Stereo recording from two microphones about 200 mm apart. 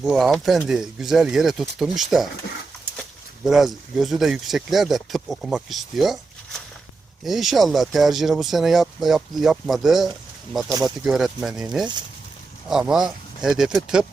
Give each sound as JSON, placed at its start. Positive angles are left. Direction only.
{"t": 0.0, "sound": "speech", "side_deg": 0}
{"t": 3.4, "sound": "speech", "side_deg": 0}
{"t": 10.7, "sound": "speech", "side_deg": -15}
{"t": 11.0, "sound": "speech", "side_deg": 0}